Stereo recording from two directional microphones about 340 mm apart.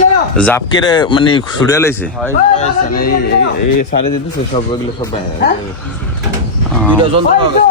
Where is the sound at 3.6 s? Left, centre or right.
Left.